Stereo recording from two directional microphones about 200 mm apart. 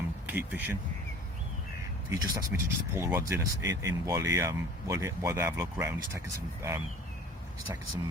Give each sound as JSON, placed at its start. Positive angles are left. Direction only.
{"t": 0.3, "sound": "speech", "side_deg": -10}
{"t": 2.0, "sound": "speech", "side_deg": -15}